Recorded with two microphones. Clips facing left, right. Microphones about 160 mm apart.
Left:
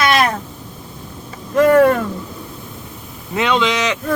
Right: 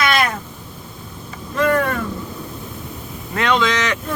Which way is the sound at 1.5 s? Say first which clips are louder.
Left 7 dB; 45° left (ahead or behind).